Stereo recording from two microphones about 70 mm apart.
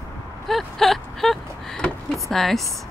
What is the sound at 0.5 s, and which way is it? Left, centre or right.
Speech, centre.